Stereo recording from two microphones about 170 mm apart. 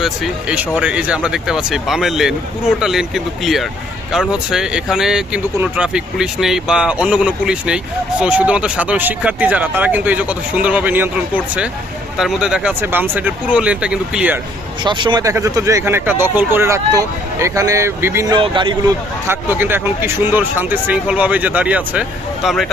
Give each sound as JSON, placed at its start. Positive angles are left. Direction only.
{"t": 0.0, "sound": "speech", "side_deg": -5}
{"t": 14.8, "sound": "speech", "side_deg": -25}
{"t": 18.3, "sound": "a man's voice", "side_deg": -30}
{"t": 19.3, "sound": "speech", "side_deg": -10}